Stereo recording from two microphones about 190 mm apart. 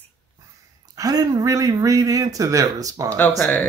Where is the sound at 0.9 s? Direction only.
20° right (ahead or behind).